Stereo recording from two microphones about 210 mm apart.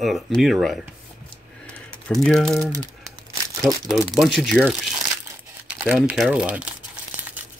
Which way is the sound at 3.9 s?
Centre (ahead or behind).